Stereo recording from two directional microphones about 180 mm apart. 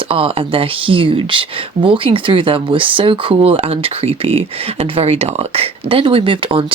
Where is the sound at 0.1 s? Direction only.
30° right (ahead or behind).